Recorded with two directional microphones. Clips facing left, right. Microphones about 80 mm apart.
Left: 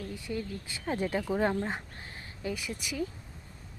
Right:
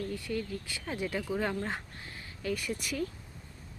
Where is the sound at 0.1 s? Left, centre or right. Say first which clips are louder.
Right 1 dB; centre.